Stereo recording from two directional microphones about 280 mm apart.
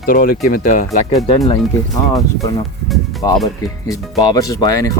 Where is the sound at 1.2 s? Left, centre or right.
Centre.